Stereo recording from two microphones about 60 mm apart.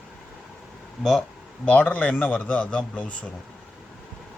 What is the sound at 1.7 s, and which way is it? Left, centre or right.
Speech, left.